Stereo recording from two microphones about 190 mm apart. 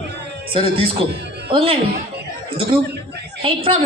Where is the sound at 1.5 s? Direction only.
30° right (ahead or behind).